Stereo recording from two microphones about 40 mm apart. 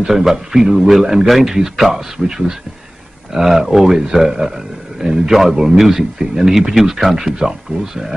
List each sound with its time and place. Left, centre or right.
0.0 s speech: centre
5.3 s a man's voice: centre